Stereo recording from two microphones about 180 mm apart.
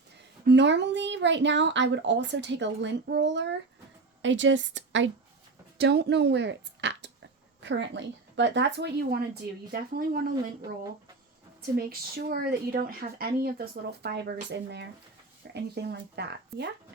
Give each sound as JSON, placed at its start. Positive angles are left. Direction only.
{"t": 0.4, "sound": "speech", "side_deg": -75}
{"t": 4.2, "sound": "a woman's voice", "side_deg": -90}
{"t": 5.7, "sound": "a woman's voice", "side_deg": -65}
{"t": 7.6, "sound": "a woman's voice", "side_deg": -90}
{"t": 11.9, "sound": "a woman's voice", "side_deg": -55}